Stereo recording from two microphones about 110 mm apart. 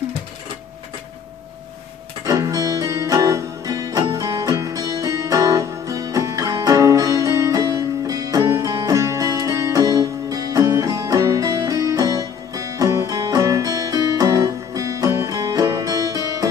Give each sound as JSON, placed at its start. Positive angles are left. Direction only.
{"t": 2.2, "sound": "music", "side_deg": -30}